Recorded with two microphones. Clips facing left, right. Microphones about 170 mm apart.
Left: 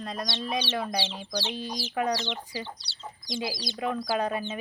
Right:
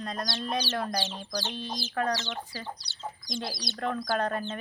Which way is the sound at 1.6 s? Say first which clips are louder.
Left 1 dB; 15° left (ahead or behind).